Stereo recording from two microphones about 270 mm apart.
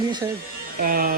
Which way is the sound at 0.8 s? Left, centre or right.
Right.